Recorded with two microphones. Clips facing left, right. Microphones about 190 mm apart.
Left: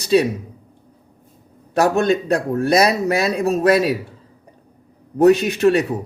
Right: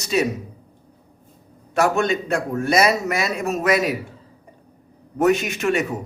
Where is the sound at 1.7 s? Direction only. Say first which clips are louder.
Left 3 dB; 35° left (ahead or behind).